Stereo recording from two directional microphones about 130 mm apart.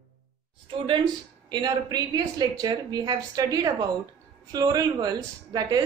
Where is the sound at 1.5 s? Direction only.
30° right (ahead or behind).